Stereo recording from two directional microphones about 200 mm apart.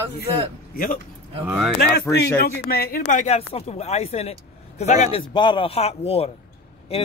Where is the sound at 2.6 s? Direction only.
50° left (ahead or behind).